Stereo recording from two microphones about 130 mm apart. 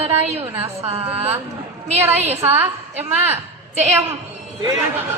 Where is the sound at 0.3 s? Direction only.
50° right (ahead or behind).